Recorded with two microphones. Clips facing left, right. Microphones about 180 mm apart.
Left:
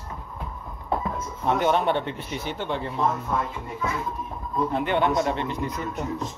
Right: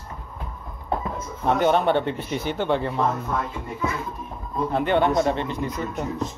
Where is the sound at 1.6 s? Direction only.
40° right (ahead or behind).